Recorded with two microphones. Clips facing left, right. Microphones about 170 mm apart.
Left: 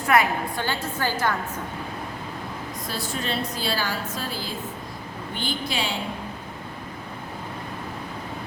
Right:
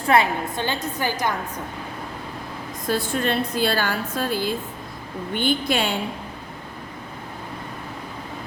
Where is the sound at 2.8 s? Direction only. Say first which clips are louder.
Right 8 dB; 55° right (ahead or behind).